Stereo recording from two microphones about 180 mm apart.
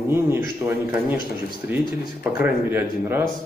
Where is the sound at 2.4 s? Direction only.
10° right (ahead or behind).